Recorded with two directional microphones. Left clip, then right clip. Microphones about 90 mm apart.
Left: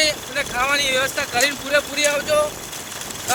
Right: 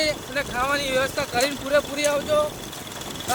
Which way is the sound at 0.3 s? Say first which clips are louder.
Left 4 dB; 20° left (ahead or behind).